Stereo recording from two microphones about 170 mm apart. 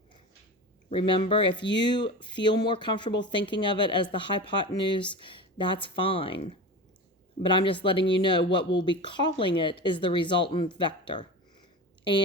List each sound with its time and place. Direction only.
0.9 s speech: 30° left (ahead or behind)